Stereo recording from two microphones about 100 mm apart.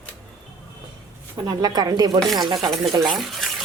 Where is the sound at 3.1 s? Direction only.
Centre (ahead or behind).